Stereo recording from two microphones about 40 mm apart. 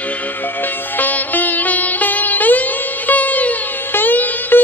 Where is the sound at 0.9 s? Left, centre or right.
Left.